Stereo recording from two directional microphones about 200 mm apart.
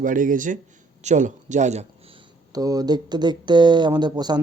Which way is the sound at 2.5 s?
20° right (ahead or behind).